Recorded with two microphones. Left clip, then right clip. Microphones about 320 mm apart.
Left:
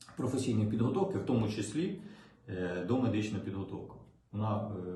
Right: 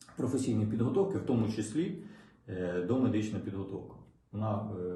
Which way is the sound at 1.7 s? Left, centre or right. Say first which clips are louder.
Right 2 dB; centre.